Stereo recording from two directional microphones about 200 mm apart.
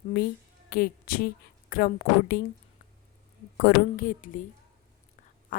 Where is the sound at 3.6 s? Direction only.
45° left (ahead or behind).